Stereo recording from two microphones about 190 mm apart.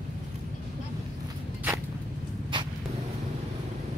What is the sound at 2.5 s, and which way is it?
Vehicle, 25° right (ahead or behind).